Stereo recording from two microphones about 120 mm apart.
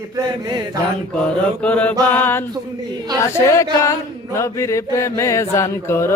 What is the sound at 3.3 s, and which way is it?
Mantra, 25° left (ahead or behind).